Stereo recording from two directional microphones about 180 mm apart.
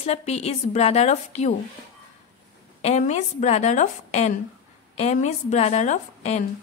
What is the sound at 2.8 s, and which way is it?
Speech, 35° left (ahead or behind).